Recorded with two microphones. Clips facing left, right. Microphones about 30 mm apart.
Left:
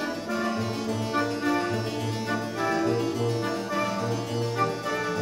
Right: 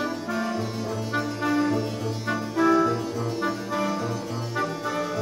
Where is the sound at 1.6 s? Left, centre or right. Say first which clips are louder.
Right 3 dB; centre.